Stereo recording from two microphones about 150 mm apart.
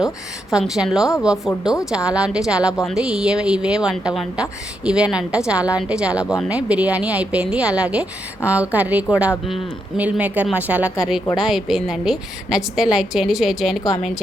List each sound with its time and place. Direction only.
0.5 s a woman's voice: 5° right (ahead or behind)